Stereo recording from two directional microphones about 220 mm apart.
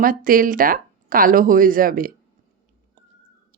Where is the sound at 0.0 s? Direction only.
40° right (ahead or behind).